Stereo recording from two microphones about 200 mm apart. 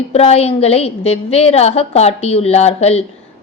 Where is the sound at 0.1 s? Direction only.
30° left (ahead or behind).